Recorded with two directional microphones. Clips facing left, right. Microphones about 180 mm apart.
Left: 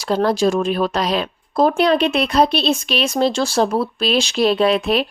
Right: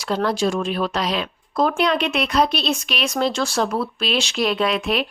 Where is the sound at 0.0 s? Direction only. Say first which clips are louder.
Left 4 dB; 35° left (ahead or behind).